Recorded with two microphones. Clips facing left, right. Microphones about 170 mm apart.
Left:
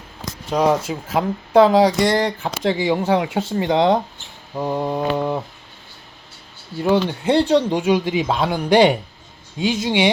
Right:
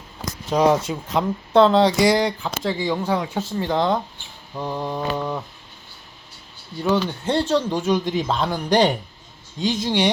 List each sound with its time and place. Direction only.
0.5 s speech: centre (ahead or behind)
2.0 s speech: 5° right (ahead or behind)
2.7 s speech: 10° left (ahead or behind)
3.2 s speech: 70° left (ahead or behind)
4.5 s mantra: 20° left (ahead or behind)
5.1 s a sound: 20° left (ahead or behind)
6.7 s speech: 10° left (ahead or behind)